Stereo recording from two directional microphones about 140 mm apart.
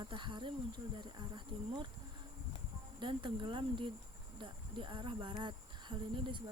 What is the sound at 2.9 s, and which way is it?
Speech, 35° right (ahead or behind).